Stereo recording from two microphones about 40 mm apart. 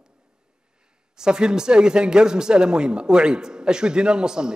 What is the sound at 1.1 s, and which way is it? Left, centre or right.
Speech, centre.